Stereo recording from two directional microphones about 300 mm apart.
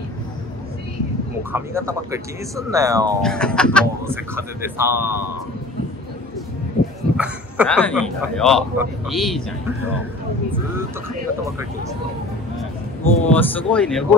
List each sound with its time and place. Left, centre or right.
1.5 s speech: centre
3.2 s a man's voice: centre
4.0 s speech: centre
7.2 s a man's voice: centre
9.8 s speech: left
10.5 s speech: centre
13.0 s a man's voice: centre